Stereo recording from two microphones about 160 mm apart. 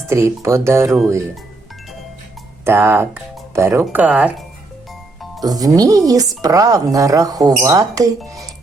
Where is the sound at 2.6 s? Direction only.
15° right (ahead or behind).